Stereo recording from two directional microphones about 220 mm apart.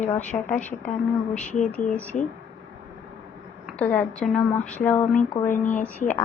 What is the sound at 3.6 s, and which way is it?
A woman's voice, 5° left (ahead or behind).